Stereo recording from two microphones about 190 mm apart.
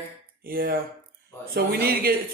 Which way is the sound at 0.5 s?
50° right (ahead or behind).